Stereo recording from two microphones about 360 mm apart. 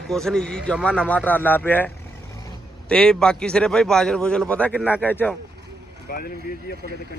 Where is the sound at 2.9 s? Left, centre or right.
Centre.